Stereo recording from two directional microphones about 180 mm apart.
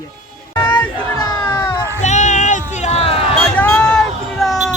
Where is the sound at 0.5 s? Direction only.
10° left (ahead or behind).